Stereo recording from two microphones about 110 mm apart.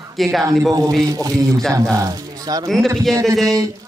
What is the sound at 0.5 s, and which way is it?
Speech, 30° right (ahead or behind).